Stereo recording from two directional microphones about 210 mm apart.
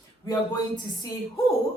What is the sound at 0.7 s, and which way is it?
Speech, 20° left (ahead or behind).